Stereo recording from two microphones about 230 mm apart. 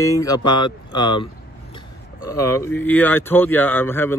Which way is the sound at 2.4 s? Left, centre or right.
Centre.